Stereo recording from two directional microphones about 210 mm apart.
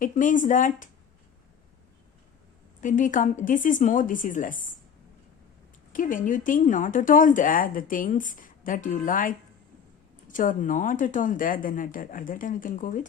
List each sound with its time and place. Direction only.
0.0 s speech: 40° left (ahead or behind)
2.8 s speech: 40° left (ahead or behind)
5.9 s speech: 40° left (ahead or behind)